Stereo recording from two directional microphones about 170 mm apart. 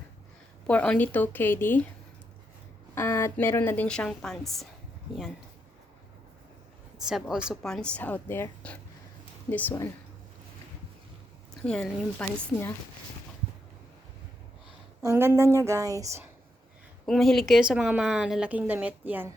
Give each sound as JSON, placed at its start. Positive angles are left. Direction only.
{"t": 0.7, "sound": "a woman's voice", "side_deg": 10}
{"t": 2.9, "sound": "a woman's voice", "side_deg": 15}
{"t": 7.0, "sound": "a woman's voice", "side_deg": -5}
{"t": 11.6, "sound": "a woman's voice", "side_deg": 5}
{"t": 15.0, "sound": "speech", "side_deg": -20}
{"t": 17.1, "sound": "a woman's voice", "side_deg": 0}